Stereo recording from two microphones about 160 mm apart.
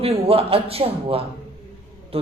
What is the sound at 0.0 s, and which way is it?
Speech, 35° right (ahead or behind).